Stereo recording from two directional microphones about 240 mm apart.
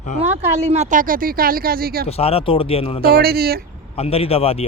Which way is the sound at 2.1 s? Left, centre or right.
Left.